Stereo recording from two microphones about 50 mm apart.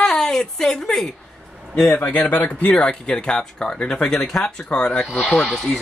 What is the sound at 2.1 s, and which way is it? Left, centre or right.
Speech, left.